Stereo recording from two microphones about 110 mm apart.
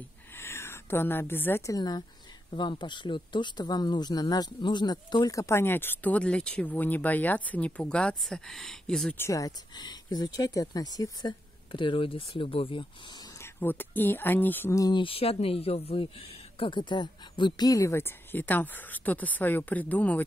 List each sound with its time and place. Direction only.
0.4 s a sound: 20° left (ahead or behind)
1.7 s speech: 40° left (ahead or behind)
5.4 s speech: 20° left (ahead or behind); by 9.1 s 5° left (ahead or behind)
9.1 s speech: 25° left (ahead or behind); by 12.8 s 55° left (ahead or behind)
13.4 s speech: 20° left (ahead or behind)
14.8 s speech: 40° left (ahead or behind)
15.0 s speech: 60° left (ahead or behind)
16.5 s speech: 50° left (ahead or behind); by 20.2 s 15° left (ahead or behind)